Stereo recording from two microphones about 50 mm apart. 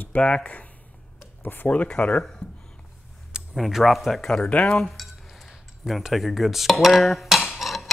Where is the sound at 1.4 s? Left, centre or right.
Left.